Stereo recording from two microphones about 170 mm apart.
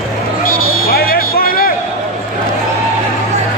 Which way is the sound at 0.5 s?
60° left (ahead or behind).